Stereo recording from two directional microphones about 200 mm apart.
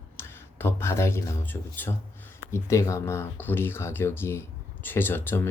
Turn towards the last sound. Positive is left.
turn(degrees=10)  # may be behind; listen again after turning